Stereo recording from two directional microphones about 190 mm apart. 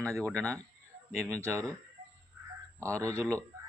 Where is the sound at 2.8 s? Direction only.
15° right (ahead or behind).